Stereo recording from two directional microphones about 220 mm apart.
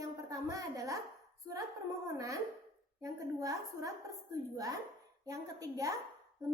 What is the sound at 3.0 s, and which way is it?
A woman's voice, 15° right (ahead or behind).